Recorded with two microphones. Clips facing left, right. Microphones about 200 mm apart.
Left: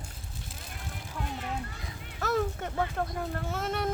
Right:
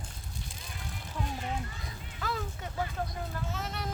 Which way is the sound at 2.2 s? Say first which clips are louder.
Left 8 dB; 50° left (ahead or behind).